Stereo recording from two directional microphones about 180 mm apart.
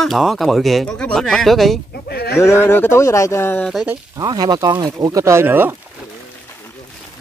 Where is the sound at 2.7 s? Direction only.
15° left (ahead or behind).